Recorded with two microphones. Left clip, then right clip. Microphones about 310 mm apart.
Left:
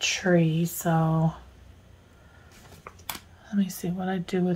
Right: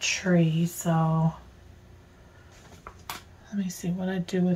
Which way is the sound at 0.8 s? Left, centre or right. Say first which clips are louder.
Left 1 dB; left.